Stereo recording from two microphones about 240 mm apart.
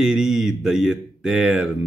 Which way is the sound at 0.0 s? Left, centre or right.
Centre.